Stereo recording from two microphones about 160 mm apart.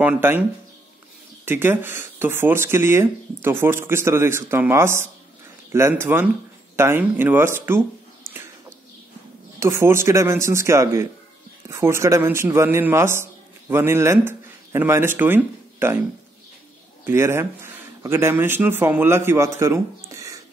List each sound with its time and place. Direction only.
0.0 s speech: 10° right (ahead or behind)
8.3 s bird: 15° right (ahead or behind)
9.6 s speech: 15° right (ahead or behind)
17.0 s speech: 15° right (ahead or behind)